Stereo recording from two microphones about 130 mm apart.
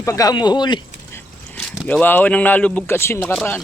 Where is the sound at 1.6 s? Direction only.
10° left (ahead or behind).